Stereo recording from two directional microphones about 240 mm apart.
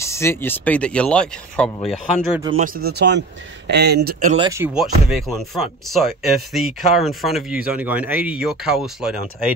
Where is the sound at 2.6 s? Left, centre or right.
Right.